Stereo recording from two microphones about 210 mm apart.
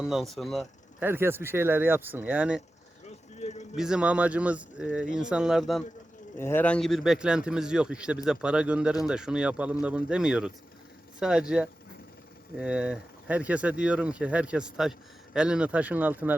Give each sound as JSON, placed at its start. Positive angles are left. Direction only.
{"t": 0.0, "sound": "speech", "side_deg": 0}
{"t": 1.0, "sound": "speech", "side_deg": -10}
{"t": 3.3, "sound": "a sound", "side_deg": 35}
{"t": 3.8, "sound": "speech", "side_deg": -5}